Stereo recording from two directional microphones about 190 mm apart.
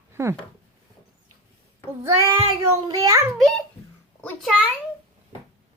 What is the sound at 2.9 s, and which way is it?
Speech, 20° right (ahead or behind).